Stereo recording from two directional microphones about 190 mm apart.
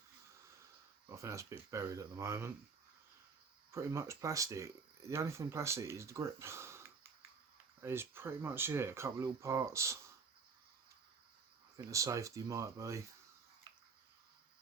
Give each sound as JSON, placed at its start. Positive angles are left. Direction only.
{"t": 1.0, "sound": "speech", "side_deg": -15}
{"t": 3.7, "sound": "speech", "side_deg": -15}
{"t": 11.9, "sound": "speech", "side_deg": -15}